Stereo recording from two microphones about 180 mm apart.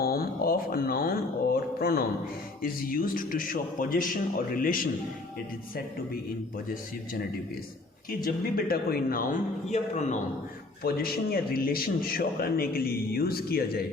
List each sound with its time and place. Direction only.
0.0 s a man's voice: 55° left (ahead or behind)
6.7 s a man's voice: 50° left (ahead or behind)
10.8 s a man's voice: 55° left (ahead or behind)